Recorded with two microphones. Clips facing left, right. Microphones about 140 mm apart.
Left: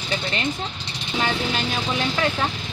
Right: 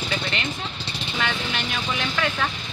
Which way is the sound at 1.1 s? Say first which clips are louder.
Left 4 dB; 30° left (ahead or behind).